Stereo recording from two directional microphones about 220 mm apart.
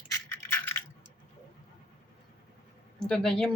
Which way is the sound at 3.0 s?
5° left (ahead or behind).